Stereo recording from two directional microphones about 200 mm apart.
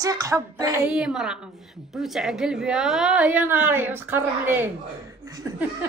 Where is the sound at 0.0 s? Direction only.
15° right (ahead or behind).